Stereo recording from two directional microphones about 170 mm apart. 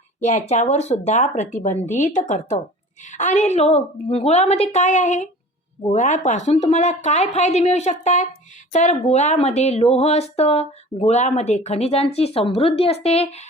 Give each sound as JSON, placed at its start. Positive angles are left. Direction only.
{"t": 0.2, "sound": "speech", "side_deg": 45}